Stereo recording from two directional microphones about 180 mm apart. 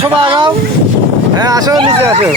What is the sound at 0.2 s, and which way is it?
Vehicle, 25° right (ahead or behind).